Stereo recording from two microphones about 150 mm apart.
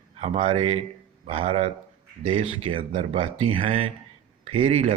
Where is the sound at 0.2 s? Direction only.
40° right (ahead or behind).